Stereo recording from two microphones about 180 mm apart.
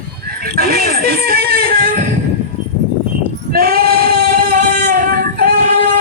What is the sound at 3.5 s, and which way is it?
Female singing, 55° right (ahead or behind).